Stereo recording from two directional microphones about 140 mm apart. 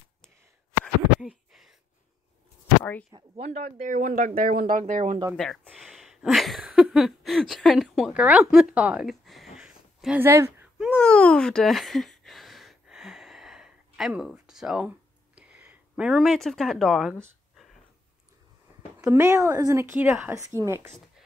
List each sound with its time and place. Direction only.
1.2 s a sound: centre (ahead or behind)
2.8 s speech: 10° left (ahead or behind)
3.1 s speech: 35° right (ahead or behind)
3.4 s speech: 55° right (ahead or behind); by 4.3 s 75° right (ahead or behind)
4.4 s speech: 90° right; by 5.2 s 65° right (ahead or behind)
5.3 s speech: 5° left (ahead or behind)
9.6 s a sound: 5° right (ahead or behind)
10.2 s speech: 20° right (ahead or behind)
10.9 s a sound: 10° left (ahead or behind)
18.9 s speech: 15° right (ahead or behind)